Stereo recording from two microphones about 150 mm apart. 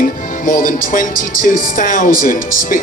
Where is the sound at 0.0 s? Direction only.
65° left (ahead or behind).